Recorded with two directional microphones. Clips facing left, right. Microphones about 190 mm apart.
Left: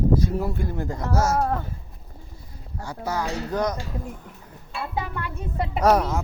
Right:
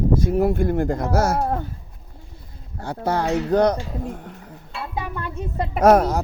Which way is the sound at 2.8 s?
60° right (ahead or behind).